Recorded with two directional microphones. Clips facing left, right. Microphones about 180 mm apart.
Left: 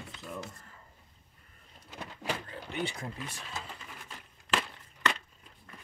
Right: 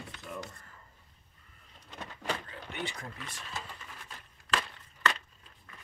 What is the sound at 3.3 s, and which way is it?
Sewing machine, 10° left (ahead or behind).